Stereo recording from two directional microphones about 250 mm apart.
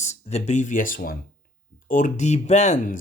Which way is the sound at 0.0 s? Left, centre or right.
Left.